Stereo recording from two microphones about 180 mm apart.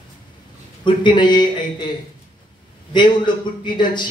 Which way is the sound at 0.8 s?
25° left (ahead or behind).